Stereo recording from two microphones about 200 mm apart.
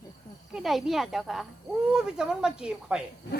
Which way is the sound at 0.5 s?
Centre (ahead or behind).